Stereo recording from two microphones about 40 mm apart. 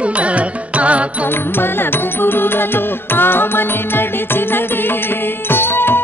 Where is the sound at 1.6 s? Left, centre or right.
Left.